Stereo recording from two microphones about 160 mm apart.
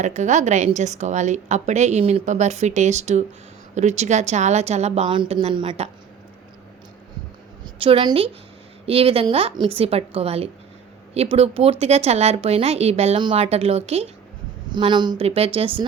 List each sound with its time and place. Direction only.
0.0 s a woman's voice: 50° right (ahead or behind)
7.6 s a woman's voice: 30° right (ahead or behind)
14.7 s a woman's voice: 30° right (ahead or behind)